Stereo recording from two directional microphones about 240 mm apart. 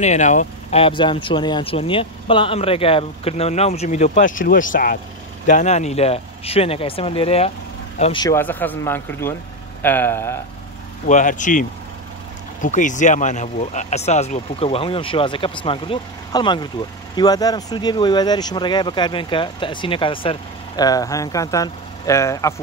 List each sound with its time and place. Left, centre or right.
0.0 s speech: left; by 10.4 s centre
11.1 s speech: left
12.6 s speech: left; by 22.5 s centre